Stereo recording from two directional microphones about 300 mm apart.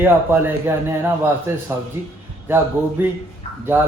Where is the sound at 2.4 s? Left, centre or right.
Centre.